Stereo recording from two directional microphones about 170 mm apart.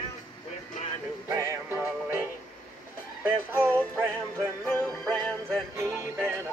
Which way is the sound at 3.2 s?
10° right (ahead or behind).